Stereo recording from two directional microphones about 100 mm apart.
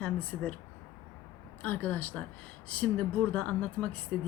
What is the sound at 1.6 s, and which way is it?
Speech, 15° left (ahead or behind).